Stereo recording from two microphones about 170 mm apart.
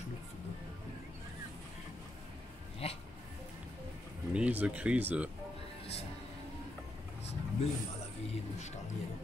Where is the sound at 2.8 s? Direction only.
35° left (ahead or behind).